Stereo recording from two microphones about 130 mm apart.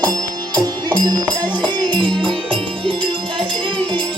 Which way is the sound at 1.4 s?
35° right (ahead or behind).